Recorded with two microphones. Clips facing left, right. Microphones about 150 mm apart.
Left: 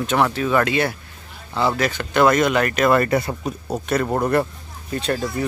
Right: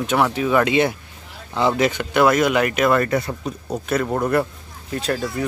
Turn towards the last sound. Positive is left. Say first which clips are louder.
# even
turn(degrees=0)  # may be behind; listen again after turning